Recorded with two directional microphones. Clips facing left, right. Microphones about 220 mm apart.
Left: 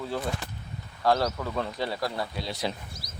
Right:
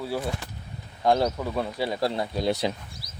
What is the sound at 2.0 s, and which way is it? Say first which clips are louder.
Speech: right 5 dB; 25° right (ahead or behind).